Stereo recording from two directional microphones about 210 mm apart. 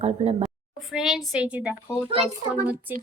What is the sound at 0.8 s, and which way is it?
Speech, centre (ahead or behind).